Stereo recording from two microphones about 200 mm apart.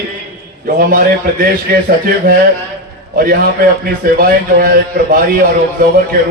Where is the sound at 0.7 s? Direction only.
45° right (ahead or behind).